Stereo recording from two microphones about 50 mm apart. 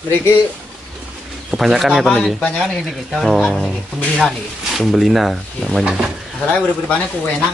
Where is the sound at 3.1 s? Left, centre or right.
Centre.